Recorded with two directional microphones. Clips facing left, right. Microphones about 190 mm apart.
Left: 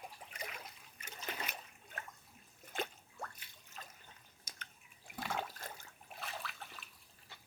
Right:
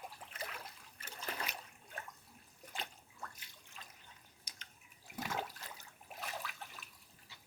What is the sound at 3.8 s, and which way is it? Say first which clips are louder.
Drip: left 4 dB; 45° left (ahead or behind).